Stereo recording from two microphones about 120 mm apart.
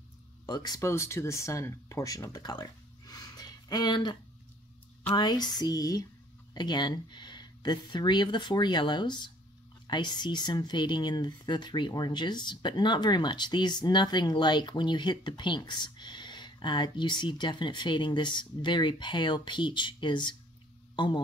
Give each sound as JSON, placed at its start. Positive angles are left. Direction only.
{"t": 0.5, "sound": "speech", "side_deg": 35}